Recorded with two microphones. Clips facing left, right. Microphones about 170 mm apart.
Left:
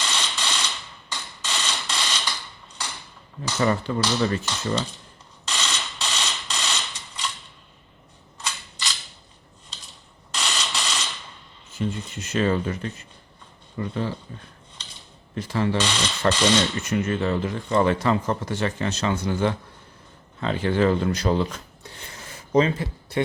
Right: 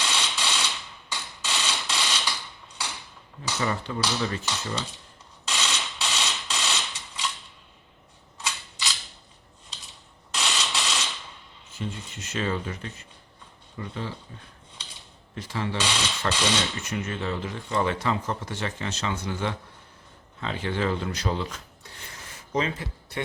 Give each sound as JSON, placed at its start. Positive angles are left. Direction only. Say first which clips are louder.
{"t": 0.0, "sound": "mechanisms", "louder": "even", "side_deg": -5}
{"t": 3.6, "sound": "speech", "louder": "left 7 dB", "side_deg": 45}
{"t": 4.4, "sound": "cutlery", "louder": "left 5 dB", "side_deg": -5}
{"t": 5.5, "sound": "mechanisms", "louder": "even", "side_deg": -5}
{"t": 8.4, "sound": "cap gun", "louder": "even", "side_deg": -5}
{"t": 10.3, "sound": "mechanisms", "louder": "even", "side_deg": -5}
{"t": 11.8, "sound": "speech", "louder": "left 7 dB", "side_deg": 45}
{"t": 15.4, "sound": "speech", "louder": "left 7 dB", "side_deg": 45}
{"t": 15.8, "sound": "mechanisms", "louder": "left 3 dB", "side_deg": -5}
{"t": 16.6, "sound": "speech", "louder": "left 6 dB", "side_deg": 50}
{"t": 21.9, "sound": "a sound", "louder": "left 3 dB", "side_deg": 25}